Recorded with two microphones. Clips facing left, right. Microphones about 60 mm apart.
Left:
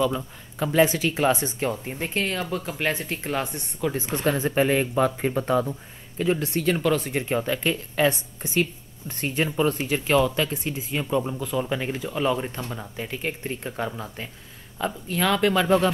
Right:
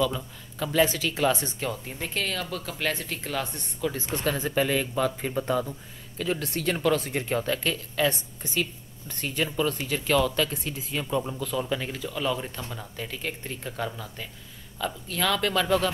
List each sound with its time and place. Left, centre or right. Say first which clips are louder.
0.0 s speech: left 3 dB; left
5.7 s speech: left 5 dB; left
6.4 s speech: left 3 dB; centre
7.7 s speech: left 4 dB; left